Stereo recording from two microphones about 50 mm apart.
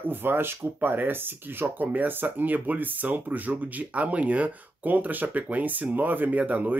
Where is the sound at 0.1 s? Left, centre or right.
Right.